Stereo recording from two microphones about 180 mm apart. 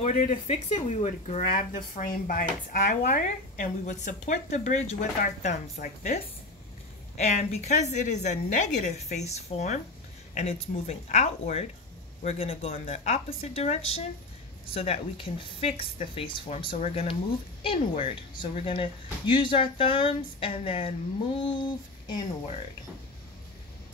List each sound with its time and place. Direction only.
0.0 s a woman's voice: 40° left (ahead or behind)
16.4 s a woman's voice: 40° left (ahead or behind); by 22.2 s 25° left (ahead or behind)